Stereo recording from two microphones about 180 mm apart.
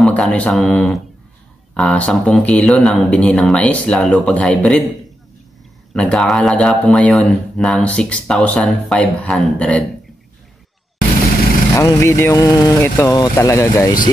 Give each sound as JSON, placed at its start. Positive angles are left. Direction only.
{"t": 0.0, "sound": "speech", "side_deg": 5}
{"t": 5.9, "sound": "speech", "side_deg": 5}
{"t": 11.7, "sound": "speech", "side_deg": 15}